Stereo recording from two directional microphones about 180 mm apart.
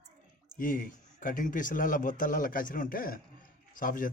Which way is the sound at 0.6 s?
50° left (ahead or behind).